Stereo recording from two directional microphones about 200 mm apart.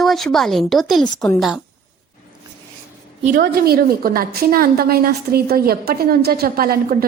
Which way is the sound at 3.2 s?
45° right (ahead or behind).